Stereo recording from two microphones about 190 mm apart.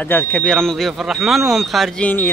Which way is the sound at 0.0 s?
10° left (ahead or behind).